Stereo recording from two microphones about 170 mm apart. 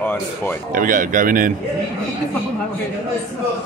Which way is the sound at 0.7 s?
50° right (ahead or behind).